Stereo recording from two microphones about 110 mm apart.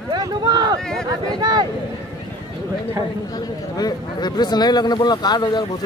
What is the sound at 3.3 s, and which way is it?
Speech, 40° left (ahead or behind).